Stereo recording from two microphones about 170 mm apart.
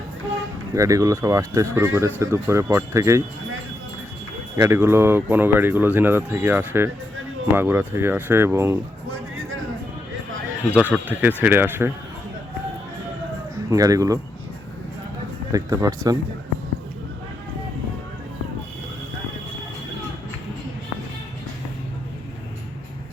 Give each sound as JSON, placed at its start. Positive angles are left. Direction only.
{"t": 0.7, "sound": "speech", "side_deg": -20}
{"t": 4.5, "sound": "speech", "side_deg": -15}
{"t": 10.7, "sound": "speech", "side_deg": -5}
{"t": 13.7, "sound": "speech", "side_deg": -20}
{"t": 15.5, "sound": "speech", "side_deg": -20}